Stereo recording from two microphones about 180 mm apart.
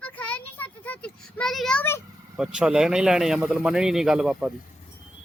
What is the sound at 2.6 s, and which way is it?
A man's voice, 5° right (ahead or behind).